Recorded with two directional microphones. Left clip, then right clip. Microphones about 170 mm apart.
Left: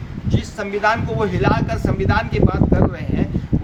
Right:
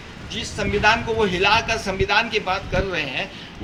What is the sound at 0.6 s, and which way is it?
Speech, 20° left (ahead or behind).